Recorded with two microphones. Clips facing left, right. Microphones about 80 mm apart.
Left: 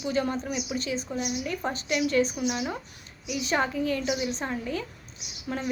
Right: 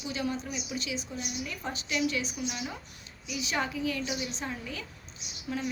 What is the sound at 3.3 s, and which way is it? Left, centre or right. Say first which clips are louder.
Speech: left 5 dB; left.